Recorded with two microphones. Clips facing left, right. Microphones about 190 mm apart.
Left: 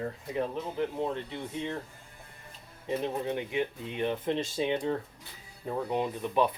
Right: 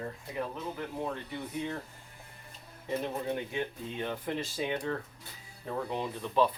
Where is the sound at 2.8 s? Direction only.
20° left (ahead or behind).